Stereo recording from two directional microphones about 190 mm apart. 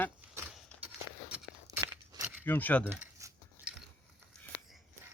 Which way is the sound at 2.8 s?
10° right (ahead or behind).